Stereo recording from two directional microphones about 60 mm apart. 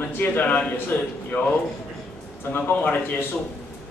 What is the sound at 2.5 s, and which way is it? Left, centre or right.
Speech, left.